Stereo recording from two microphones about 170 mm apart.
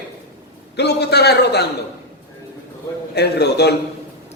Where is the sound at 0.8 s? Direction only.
75° left (ahead or behind).